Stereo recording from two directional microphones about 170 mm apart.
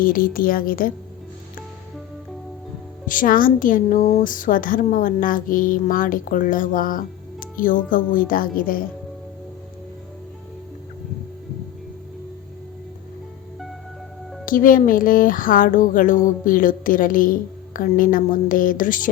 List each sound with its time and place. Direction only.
0.0 s a woman's voice: 55° left (ahead or behind)
3.1 s speech: 55° left (ahead or behind)
14.4 s speech: 55° left (ahead or behind)